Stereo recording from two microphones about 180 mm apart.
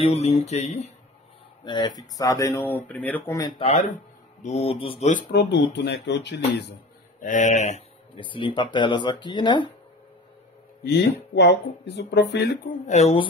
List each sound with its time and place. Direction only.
0.0 s mantra: 35° left (ahead or behind)
1.6 s speech: 25° left (ahead or behind)
3.5 s mantra: 35° left (ahead or behind)
3.9 s speech: 40° left (ahead or behind)
5.3 s speech: 70° left (ahead or behind)
7.2 s speech: 45° left (ahead or behind)
8.2 s speech: 30° left (ahead or behind)
10.8 s speech: 65° left (ahead or behind)
12.8 s mantra: 40° left (ahead or behind)